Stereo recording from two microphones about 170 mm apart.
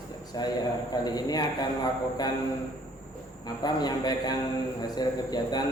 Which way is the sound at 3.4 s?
25° left (ahead or behind).